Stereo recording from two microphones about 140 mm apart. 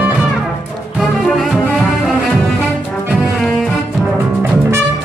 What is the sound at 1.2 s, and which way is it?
Music, centre (ahead or behind).